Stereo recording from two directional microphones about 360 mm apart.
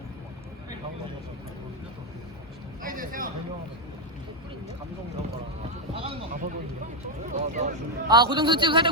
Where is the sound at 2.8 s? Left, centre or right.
Right.